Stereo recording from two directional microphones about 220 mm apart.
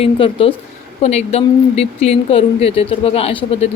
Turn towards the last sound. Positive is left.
turn(degrees=25)  # may be behind; listen again after turning